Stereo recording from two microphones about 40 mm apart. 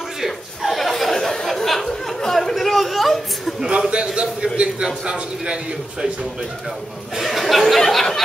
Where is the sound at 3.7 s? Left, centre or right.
Right.